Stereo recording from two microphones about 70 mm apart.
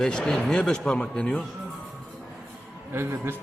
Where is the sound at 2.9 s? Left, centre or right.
Right.